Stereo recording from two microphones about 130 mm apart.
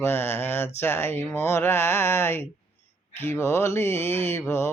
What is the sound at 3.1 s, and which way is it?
Speech, 20° left (ahead or behind).